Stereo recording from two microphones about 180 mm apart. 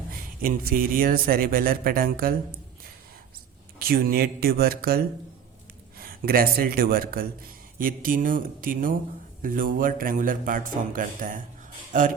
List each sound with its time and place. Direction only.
0.1 s speech: 55° right (ahead or behind)
3.8 s speech: 55° right (ahead or behind)